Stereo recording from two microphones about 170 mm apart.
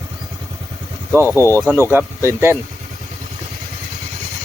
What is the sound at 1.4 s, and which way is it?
Speech, 15° left (ahead or behind).